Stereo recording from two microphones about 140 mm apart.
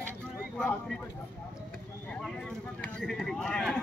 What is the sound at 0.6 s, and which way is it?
Speech, 5° left (ahead or behind).